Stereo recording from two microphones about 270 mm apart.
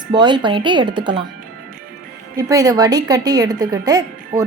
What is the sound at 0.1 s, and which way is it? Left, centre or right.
A woman's voice, centre.